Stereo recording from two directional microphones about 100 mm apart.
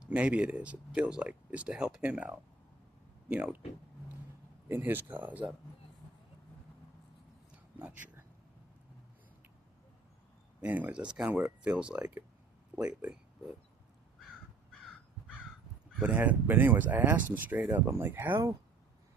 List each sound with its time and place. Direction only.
0.0 s speech: 10° right (ahead or behind)
4.7 s speech: 20° right (ahead or behind)
7.5 s a sound: 15° right (ahead or behind)
10.6 s speech: 15° right (ahead or behind)
16.0 s speech: 15° right (ahead or behind)